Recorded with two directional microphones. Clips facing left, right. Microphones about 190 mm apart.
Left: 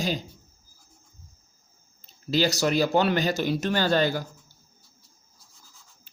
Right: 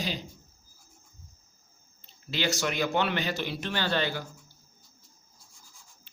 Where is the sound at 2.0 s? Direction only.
40° left (ahead or behind).